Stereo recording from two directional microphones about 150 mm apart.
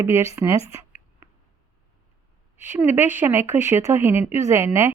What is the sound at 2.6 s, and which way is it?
Speech, 15° right (ahead or behind).